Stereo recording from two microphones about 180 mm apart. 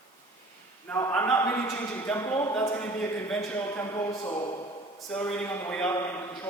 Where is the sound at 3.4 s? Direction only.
15° left (ahead or behind).